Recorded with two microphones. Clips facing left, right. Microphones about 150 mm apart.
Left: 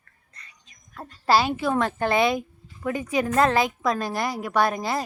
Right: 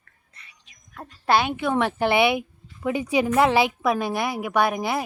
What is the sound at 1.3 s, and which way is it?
Speech, 5° left (ahead or behind).